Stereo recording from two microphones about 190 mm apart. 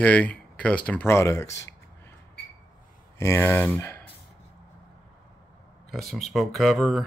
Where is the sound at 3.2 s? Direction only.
15° left (ahead or behind).